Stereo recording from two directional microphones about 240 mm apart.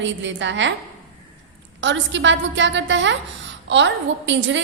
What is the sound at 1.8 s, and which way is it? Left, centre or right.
A woman's voice, right.